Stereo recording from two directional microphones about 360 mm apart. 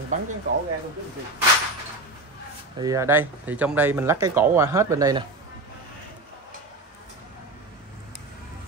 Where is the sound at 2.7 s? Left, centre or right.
Centre.